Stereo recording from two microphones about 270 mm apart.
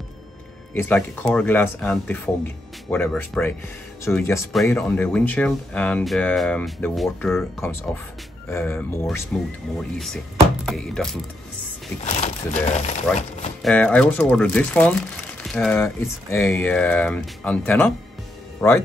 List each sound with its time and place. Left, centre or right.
0.7 s speech: centre
12.2 s speech: left
13.6 s speech: centre